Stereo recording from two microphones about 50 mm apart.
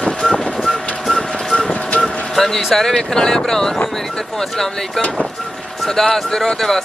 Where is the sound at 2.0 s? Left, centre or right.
Centre.